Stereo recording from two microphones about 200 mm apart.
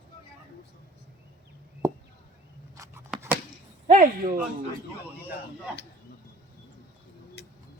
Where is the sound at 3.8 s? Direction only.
40° right (ahead or behind).